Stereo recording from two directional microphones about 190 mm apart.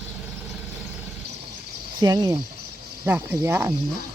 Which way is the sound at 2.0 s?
20° right (ahead or behind).